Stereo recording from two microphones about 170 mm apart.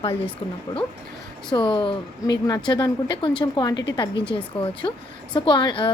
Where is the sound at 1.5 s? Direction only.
30° left (ahead or behind).